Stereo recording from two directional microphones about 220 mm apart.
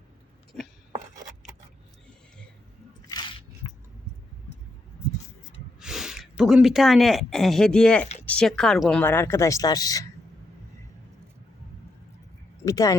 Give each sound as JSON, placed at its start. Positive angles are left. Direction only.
{"t": 3.1, "sound": "a sound", "side_deg": 20}
{"t": 5.8, "sound": "speech", "side_deg": 0}
{"t": 12.6, "sound": "speech", "side_deg": 15}